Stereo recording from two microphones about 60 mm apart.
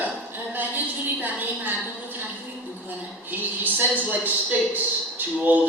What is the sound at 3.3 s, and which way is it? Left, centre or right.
A man's voice, right.